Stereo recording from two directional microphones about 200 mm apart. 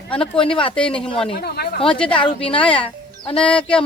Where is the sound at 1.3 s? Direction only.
50° left (ahead or behind).